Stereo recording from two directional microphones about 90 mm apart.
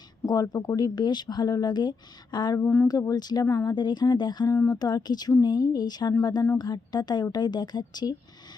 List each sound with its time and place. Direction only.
0.3 s speech: 45° left (ahead or behind)
2.6 s speech: 25° left (ahead or behind)
2.8 s speech: 45° left (ahead or behind)
3.4 s speech: 30° left (ahead or behind)
3.7 s speech: 55° left (ahead or behind)
4.4 s speech: 35° left (ahead or behind)
4.8 s speech: 50° left (ahead or behind)